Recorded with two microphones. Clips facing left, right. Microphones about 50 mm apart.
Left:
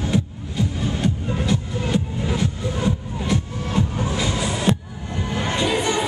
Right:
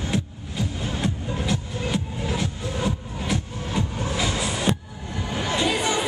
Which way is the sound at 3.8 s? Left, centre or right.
Centre.